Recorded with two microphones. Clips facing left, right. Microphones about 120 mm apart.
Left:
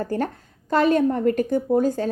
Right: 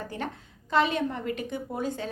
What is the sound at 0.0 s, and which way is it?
A woman's voice, 45° left (ahead or behind).